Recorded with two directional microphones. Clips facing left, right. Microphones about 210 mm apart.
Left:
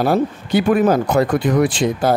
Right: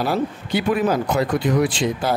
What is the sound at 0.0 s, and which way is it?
Speech, 50° left (ahead or behind).